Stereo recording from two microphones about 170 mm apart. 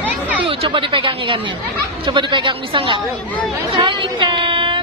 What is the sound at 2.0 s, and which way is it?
Speech, 30° right (ahead or behind).